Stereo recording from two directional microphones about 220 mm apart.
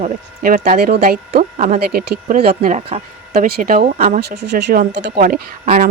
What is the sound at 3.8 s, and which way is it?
Speech, 30° right (ahead or behind).